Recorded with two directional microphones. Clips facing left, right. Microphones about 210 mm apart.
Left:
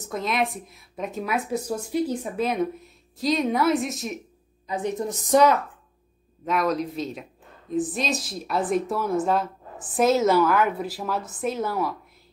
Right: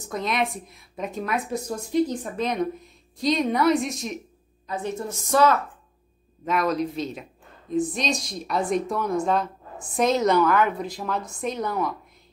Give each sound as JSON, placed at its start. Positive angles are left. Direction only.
{"t": 0.1, "sound": "speech", "side_deg": 0}
{"t": 4.6, "sound": "a woman's voice", "side_deg": 15}
{"t": 6.4, "sound": "speech", "side_deg": 0}